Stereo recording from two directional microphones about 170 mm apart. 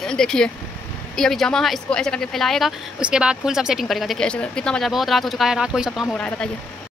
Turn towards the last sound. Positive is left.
turn(degrees=5)  # may be behind; listen again after turning